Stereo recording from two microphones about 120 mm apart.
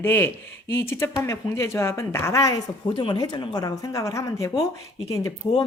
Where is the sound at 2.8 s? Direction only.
45° left (ahead or behind); by 4.6 s 25° left (ahead or behind).